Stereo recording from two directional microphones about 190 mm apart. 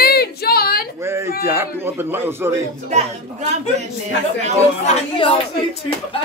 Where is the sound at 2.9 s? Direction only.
35° right (ahead or behind).